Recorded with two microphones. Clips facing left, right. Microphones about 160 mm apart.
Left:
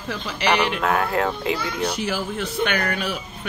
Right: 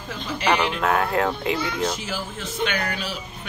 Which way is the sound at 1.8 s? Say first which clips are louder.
Left 2 dB; 65° left (ahead or behind).